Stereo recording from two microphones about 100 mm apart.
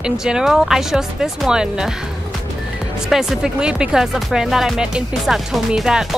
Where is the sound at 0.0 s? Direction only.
5° right (ahead or behind).